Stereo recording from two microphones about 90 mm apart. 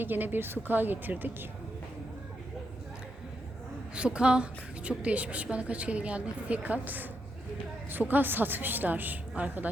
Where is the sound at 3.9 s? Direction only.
10° right (ahead or behind).